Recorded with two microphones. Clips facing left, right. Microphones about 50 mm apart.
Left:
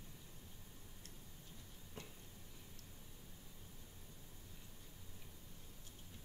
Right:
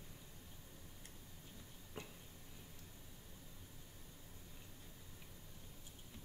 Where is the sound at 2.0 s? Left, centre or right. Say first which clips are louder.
Right 3 dB; right.